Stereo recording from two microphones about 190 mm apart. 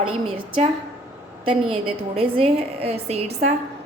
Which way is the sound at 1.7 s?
30° right (ahead or behind).